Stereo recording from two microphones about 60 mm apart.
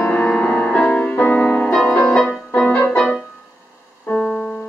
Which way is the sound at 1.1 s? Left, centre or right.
Left.